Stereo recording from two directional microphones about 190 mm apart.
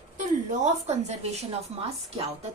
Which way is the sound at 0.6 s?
35° right (ahead or behind).